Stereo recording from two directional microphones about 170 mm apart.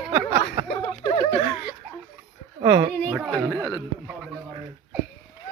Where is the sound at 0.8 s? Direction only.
25° left (ahead or behind).